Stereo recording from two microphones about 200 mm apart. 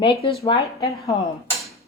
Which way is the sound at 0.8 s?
15° left (ahead or behind).